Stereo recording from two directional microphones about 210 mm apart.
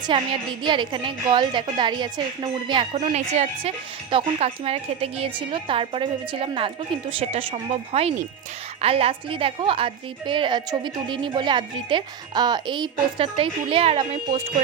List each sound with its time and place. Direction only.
0.1 s a woman's voice: 25° right (ahead or behind)